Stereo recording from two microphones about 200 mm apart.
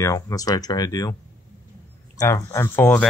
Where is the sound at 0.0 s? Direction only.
15° left (ahead or behind).